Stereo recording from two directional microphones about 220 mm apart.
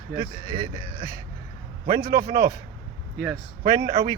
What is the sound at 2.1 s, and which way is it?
Speech, 45° right (ahead or behind).